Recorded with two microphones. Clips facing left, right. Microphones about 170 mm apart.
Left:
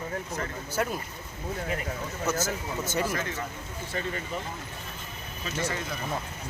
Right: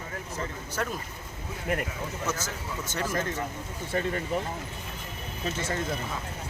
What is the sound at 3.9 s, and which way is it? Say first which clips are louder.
Speech: right 4 dB; 50° right (ahead or behind).